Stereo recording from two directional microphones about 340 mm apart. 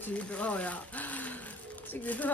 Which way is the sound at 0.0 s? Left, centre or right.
Centre.